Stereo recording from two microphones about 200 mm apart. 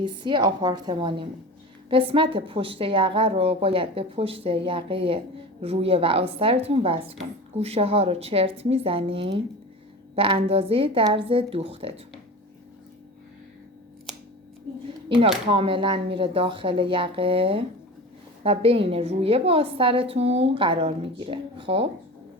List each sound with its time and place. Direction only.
0.0 s a woman's voice: 25° right (ahead or behind)
14.1 s scissors: centre (ahead or behind)
15.4 s a woman's voice: 25° right (ahead or behind)